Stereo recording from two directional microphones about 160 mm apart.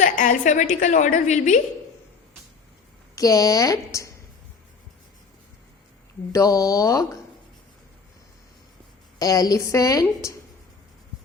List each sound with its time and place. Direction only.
0.0 s a woman's voice: 55° left (ahead or behind)
3.2 s a woman's voice: 20° left (ahead or behind)
6.3 s a woman's voice: 20° left (ahead or behind)
9.1 s a woman's voice: 20° left (ahead or behind)